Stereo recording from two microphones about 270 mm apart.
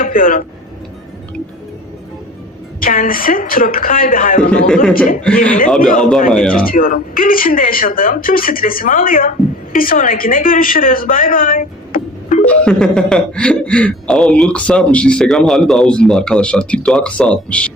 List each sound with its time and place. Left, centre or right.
0.0 s speech: left
2.8 s speech: left
6.3 s speech: centre
6.6 s a woman's voice: left
12.5 s speech: centre